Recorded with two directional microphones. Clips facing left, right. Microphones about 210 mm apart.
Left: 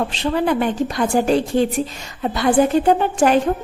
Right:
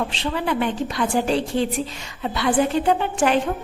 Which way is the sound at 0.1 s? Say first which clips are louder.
Left 5 dB; 45° left (ahead or behind).